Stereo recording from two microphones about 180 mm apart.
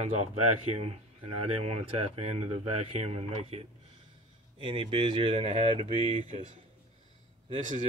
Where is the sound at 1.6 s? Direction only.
30° right (ahead or behind).